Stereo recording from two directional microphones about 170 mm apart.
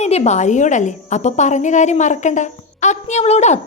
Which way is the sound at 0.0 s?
40° left (ahead or behind).